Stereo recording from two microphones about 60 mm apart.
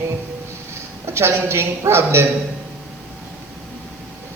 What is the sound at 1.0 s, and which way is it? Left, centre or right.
A man's voice, right.